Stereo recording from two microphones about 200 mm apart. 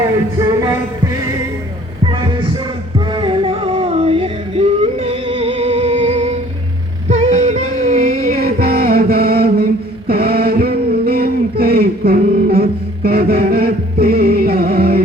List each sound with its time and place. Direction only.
2.0 s heart murmur: 25° right (ahead or behind)
3.1 s music: 25° right (ahead or behind); by 9.6 s 50° right (ahead or behind)
10.1 s a sound: 50° right (ahead or behind)